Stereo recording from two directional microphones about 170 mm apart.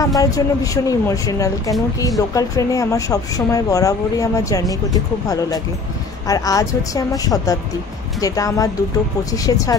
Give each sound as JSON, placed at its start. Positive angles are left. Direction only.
{"t": 0.0, "sound": "a woman's voice", "side_deg": 20}